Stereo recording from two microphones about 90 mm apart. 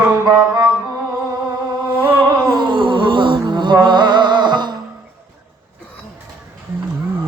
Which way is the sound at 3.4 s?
60° right (ahead or behind).